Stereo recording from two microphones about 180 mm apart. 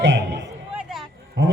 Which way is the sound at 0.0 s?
75° right (ahead or behind).